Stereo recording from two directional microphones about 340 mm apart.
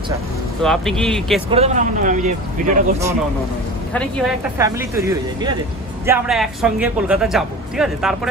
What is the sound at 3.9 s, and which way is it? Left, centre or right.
A man's voice, centre.